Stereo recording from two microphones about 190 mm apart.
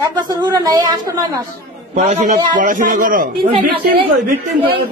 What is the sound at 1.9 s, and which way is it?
A man's voice, 40° right (ahead or behind).